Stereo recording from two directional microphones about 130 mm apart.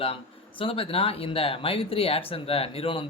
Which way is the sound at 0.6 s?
45° left (ahead or behind).